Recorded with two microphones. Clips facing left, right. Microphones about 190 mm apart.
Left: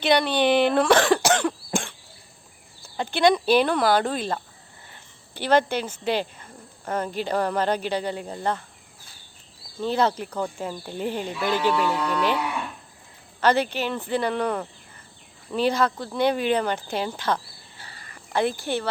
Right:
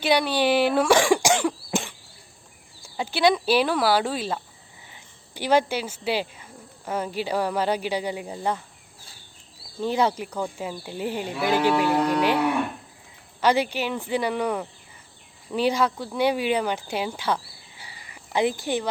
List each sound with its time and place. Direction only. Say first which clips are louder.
0.0 s speech: left 1 dB; 10° right (ahead or behind)
9.8 s speech: even; 10° right (ahead or behind)
11.5 s speech: right 3 dB; 50° right (ahead or behind)
13.4 s speech: even; 10° right (ahead or behind)